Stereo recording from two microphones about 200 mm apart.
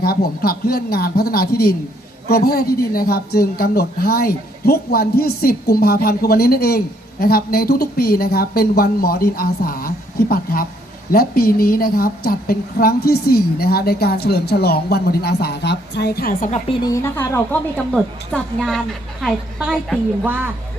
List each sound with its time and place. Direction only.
0.0 s a woman's voice: 50° left (ahead or behind)
16.6 s a woman's voice: 25° left (ahead or behind)
16.9 s a woman's voice: 15° left (ahead or behind)
17.9 s a woman's voice: centre (ahead or behind)